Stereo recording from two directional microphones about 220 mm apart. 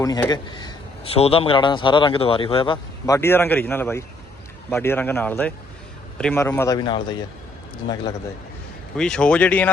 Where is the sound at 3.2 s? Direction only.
10° left (ahead or behind).